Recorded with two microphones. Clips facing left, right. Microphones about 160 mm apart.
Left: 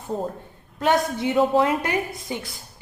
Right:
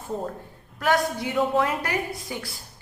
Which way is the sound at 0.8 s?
25° left (ahead or behind).